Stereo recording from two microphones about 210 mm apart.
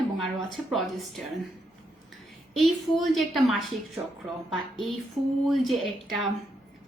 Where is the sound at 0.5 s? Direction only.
Centre (ahead or behind).